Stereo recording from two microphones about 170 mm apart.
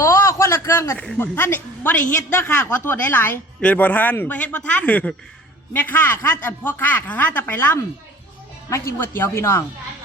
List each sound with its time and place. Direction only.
0.0 s a woman's voice: 15° left (ahead or behind)